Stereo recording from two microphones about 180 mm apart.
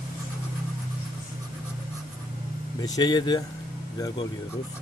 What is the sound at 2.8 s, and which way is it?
Speech, 20° left (ahead or behind).